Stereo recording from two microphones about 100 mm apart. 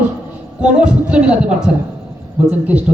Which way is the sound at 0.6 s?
10° right (ahead or behind).